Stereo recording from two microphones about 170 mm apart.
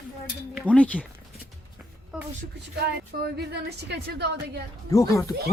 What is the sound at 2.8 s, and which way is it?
A woman's voice, 75° right (ahead or behind).